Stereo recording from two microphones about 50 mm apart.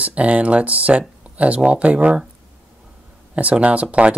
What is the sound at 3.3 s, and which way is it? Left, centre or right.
Speech, right.